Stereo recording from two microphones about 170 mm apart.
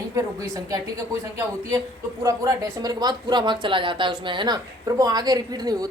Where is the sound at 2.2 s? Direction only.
20° right (ahead or behind).